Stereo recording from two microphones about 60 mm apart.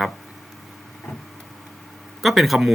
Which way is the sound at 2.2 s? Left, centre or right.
Centre.